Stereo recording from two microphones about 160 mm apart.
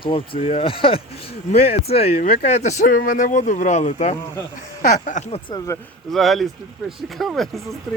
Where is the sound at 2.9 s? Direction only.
60° left (ahead or behind).